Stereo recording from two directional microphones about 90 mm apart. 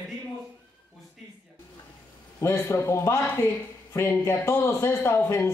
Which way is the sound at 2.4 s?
30° left (ahead or behind).